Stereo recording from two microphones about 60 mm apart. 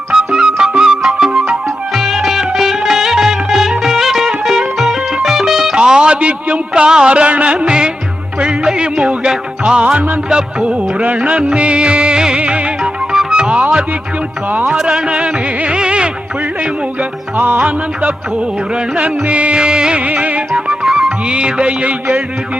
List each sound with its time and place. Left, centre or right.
0.1 s music: centre
5.7 s a man's voice: centre
8.4 s music: centre
14.8 s music: centre
17.3 s music: right
20.5 s music: centre; by 22.2 s right